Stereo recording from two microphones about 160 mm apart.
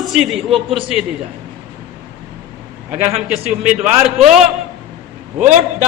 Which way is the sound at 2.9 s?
40° right (ahead or behind).